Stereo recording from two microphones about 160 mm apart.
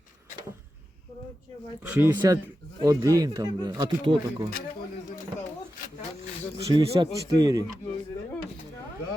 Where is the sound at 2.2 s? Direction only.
25° right (ahead or behind).